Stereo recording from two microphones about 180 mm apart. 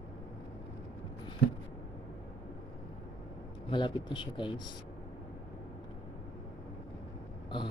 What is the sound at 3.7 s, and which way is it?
Speech, 25° left (ahead or behind).